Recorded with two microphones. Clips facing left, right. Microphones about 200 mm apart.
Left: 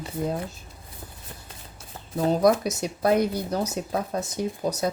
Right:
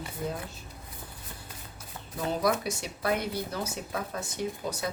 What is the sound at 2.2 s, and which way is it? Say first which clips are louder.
Speech: left 7 dB; 40° left (ahead or behind).